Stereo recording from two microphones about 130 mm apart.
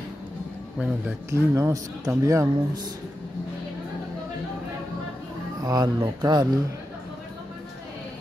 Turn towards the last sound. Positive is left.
turn(degrees=-30)  # may be behind; listen again after turning